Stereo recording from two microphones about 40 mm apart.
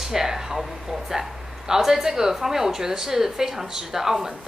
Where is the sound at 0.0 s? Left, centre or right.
Centre.